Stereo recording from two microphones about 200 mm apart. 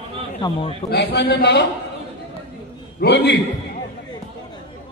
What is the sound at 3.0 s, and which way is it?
Chant, 55° left (ahead or behind).